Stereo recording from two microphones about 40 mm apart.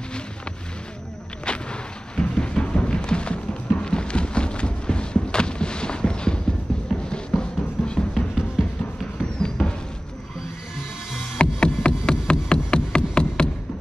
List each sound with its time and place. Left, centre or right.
1.4 s music: left
9.2 s a sound: centre
11.3 s music: left